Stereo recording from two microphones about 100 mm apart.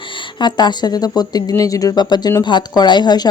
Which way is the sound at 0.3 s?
45° left (ahead or behind).